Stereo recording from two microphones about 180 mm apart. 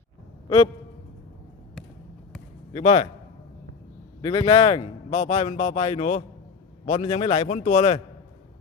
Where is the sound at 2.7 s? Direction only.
40° left (ahead or behind).